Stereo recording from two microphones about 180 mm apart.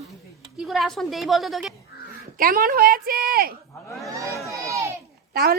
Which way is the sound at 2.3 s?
50° right (ahead or behind).